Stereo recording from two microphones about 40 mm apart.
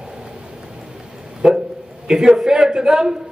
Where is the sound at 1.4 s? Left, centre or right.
Centre.